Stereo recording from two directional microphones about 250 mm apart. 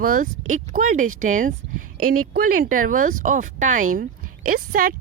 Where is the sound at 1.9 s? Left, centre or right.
Right.